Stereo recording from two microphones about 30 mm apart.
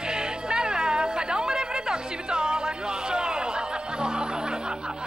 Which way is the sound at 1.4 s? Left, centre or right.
Right.